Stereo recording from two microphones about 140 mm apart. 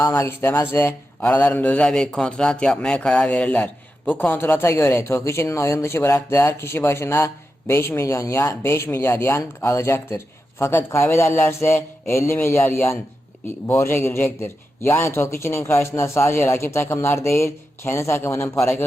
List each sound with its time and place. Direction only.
0.0 s a man's voice: 15° left (ahead or behind)